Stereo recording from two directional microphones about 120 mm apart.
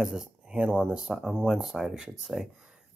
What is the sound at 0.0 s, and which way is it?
Speech, 5° right (ahead or behind).